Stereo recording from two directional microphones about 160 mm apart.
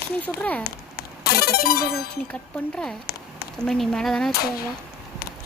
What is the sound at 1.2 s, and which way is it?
Music, 75° left (ahead or behind).